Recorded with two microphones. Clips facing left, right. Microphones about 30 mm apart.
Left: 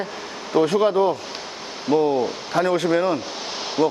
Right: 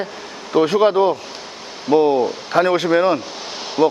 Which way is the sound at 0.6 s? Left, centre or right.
Right.